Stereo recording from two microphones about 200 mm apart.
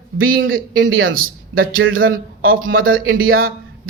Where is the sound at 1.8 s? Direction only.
85° right.